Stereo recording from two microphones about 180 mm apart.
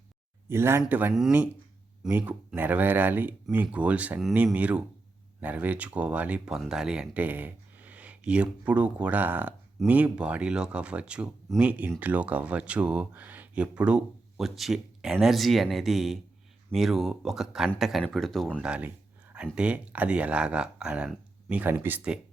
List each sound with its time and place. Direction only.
0.4 s speech: 15° right (ahead or behind)